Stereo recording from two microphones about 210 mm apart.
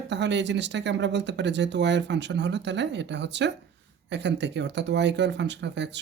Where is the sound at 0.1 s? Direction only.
55° right (ahead or behind).